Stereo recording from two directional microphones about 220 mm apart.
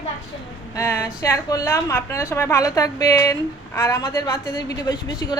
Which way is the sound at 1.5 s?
15° left (ahead or behind).